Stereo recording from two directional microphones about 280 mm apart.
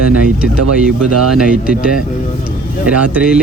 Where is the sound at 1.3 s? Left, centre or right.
Centre.